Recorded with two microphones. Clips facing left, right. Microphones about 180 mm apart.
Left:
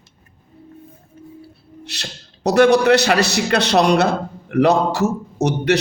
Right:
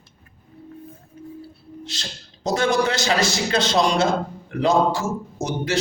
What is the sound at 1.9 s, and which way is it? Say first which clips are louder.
A man's voice: left 2 dB; 65° left (ahead or behind).